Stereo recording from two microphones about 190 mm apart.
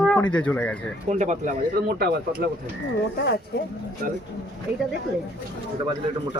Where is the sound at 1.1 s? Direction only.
40° right (ahead or behind).